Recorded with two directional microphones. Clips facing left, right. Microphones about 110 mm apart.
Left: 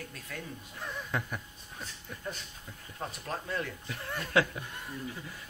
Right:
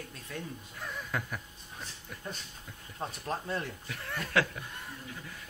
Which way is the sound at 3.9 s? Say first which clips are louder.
Left 1 dB; 10° left (ahead or behind).